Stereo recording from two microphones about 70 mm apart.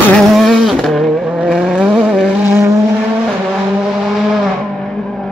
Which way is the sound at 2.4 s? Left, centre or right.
Right.